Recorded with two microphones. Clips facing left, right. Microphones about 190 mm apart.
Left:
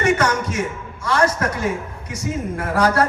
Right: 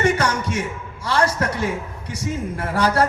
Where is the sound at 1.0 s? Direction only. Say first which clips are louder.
Left 1 dB; 30° right (ahead or behind).